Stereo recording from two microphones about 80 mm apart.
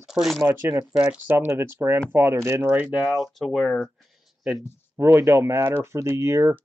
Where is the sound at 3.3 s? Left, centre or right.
Centre.